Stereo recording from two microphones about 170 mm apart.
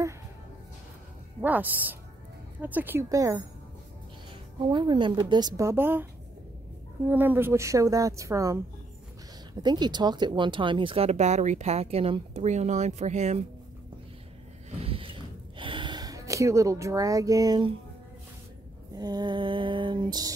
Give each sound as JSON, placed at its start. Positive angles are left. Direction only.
{"t": 1.4, "sound": "a woman's voice", "side_deg": -10}
{"t": 4.6, "sound": "a woman's voice", "side_deg": -25}
{"t": 7.1, "sound": "a woman's voice", "side_deg": -10}
{"t": 14.8, "sound": "a sound", "side_deg": -35}
{"t": 15.5, "sound": "speech", "side_deg": -30}
{"t": 18.9, "sound": "a woman's voice", "side_deg": -25}